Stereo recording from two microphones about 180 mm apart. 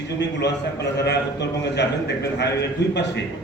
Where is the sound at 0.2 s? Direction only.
70° left (ahead or behind).